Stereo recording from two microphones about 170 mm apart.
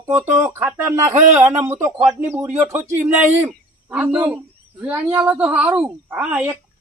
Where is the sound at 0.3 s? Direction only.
15° right (ahead or behind).